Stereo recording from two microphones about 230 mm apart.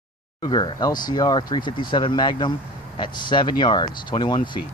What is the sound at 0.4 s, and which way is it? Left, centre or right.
Speech, centre.